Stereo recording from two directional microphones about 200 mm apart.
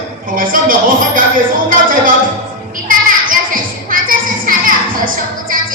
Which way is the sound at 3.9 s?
45° right (ahead or behind).